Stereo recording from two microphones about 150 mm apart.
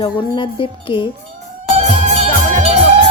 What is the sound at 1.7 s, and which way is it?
Music, 50° right (ahead or behind).